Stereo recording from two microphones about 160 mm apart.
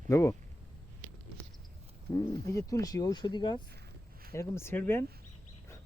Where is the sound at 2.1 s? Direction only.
20° left (ahead or behind).